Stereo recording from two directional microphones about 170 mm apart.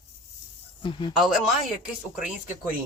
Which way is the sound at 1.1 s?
Centre (ahead or behind).